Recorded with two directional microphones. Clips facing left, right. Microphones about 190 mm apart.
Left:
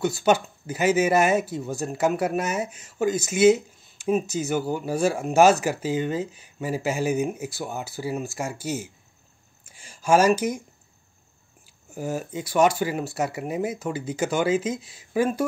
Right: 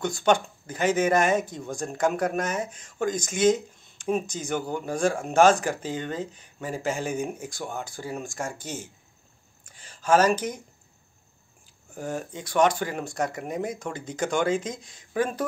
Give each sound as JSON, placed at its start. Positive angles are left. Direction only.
{"t": 0.0, "sound": "speech", "side_deg": 5}
{"t": 9.7, "sound": "a sound", "side_deg": 10}
{"t": 11.9, "sound": "speech", "side_deg": 5}